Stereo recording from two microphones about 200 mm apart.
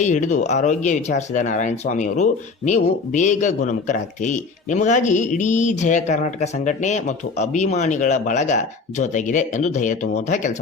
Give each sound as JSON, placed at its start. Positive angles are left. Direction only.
{"t": 0.0, "sound": "speech", "side_deg": 35}